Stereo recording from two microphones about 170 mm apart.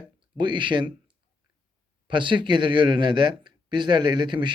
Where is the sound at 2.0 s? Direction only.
30° right (ahead or behind).